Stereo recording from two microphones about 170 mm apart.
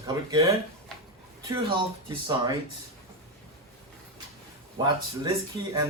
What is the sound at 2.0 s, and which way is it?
Speech, 25° right (ahead or behind).